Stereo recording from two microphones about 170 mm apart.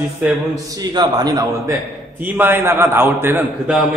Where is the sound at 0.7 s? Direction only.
25° right (ahead or behind).